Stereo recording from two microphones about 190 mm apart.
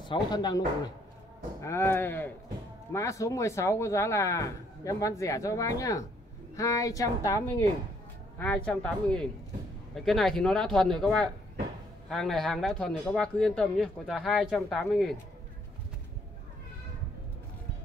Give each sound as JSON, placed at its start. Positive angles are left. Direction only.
{"t": 0.0, "sound": "speech", "side_deg": 25}
{"t": 1.6, "sound": "speech", "side_deg": 15}